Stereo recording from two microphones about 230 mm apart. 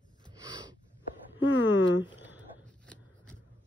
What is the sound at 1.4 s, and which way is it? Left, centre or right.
Speech, left.